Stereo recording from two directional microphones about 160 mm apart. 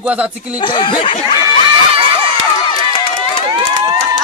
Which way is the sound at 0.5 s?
30° left (ahead or behind).